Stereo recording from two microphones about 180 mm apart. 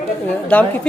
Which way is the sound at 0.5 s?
5° left (ahead or behind).